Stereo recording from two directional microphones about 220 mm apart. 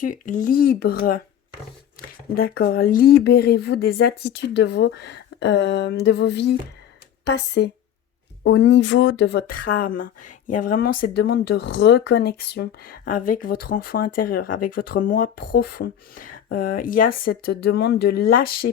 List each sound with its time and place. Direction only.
0.0 s speech: 35° left (ahead or behind)
2.3 s speech: 45° left (ahead or behind)